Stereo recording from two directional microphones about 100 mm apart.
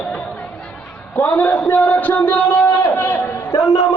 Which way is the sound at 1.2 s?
20° left (ahead or behind).